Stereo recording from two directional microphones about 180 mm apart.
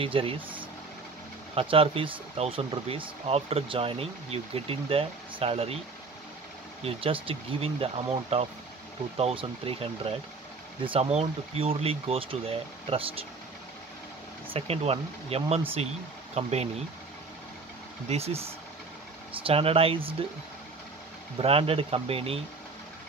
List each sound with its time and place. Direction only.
0.0 s speech: 30° right (ahead or behind)
6.8 s speech: 30° right (ahead or behind)
14.5 s speech: 35° right (ahead or behind)
18.0 s speech: 35° right (ahead or behind)
21.4 s speech: 30° right (ahead or behind)